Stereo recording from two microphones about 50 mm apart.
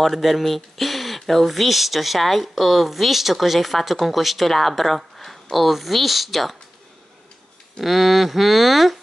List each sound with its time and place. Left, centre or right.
0.0 s speech: centre
7.8 s speech: centre